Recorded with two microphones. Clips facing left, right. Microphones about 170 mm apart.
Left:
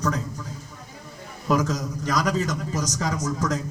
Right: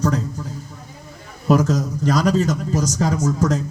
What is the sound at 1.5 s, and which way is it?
A man's voice, 30° right (ahead or behind).